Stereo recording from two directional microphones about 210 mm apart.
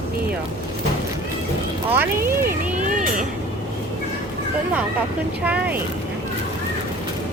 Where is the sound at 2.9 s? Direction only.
35° right (ahead or behind).